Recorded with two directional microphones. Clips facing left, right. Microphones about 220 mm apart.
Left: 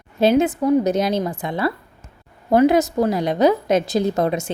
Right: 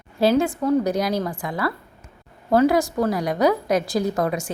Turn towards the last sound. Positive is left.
turn(degrees=25)  # may be behind; listen again after turning